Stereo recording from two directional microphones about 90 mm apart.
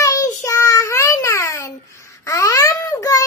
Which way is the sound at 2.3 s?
35° left (ahead or behind).